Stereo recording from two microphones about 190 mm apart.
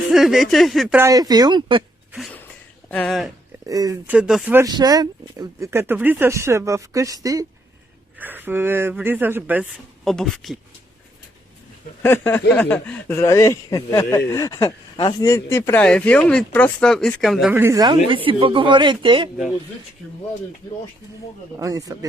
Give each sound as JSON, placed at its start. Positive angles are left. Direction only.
{"t": 0.1, "sound": "speech", "side_deg": 0}
{"t": 0.9, "sound": "speech", "side_deg": -15}
{"t": 2.9, "sound": "speech", "side_deg": 5}
{"t": 3.7, "sound": "speech", "side_deg": -20}
{"t": 4.0, "sound": "speech", "side_deg": -5}
{"t": 4.7, "sound": "speech", "side_deg": -20}
{"t": 10.0, "sound": "speech", "side_deg": 0}
{"t": 12.0, "sound": "speech", "side_deg": 10}
{"t": 17.5, "sound": "speech", "side_deg": -15}
{"t": 21.6, "sound": "speech", "side_deg": -20}